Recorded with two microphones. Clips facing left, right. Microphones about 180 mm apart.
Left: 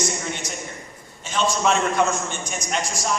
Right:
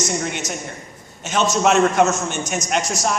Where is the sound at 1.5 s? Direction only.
70° right (ahead or behind).